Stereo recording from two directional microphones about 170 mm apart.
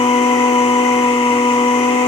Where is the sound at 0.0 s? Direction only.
35° left (ahead or behind).